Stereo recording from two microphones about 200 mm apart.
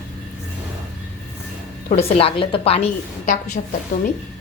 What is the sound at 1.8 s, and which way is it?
A woman's voice, 35° left (ahead or behind).